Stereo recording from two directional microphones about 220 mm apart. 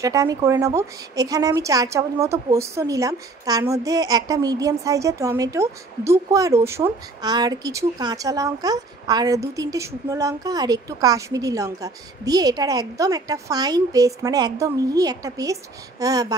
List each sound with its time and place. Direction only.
0.0 s a woman's voice: 15° right (ahead or behind)